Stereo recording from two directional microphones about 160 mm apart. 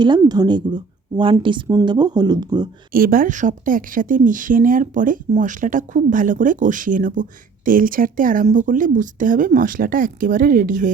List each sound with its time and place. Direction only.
0.0 s speech: 25° right (ahead or behind)
2.9 s a woman's voice: 65° right (ahead or behind)